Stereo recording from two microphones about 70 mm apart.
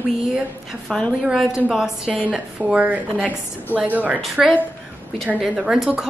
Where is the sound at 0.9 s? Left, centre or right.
Centre.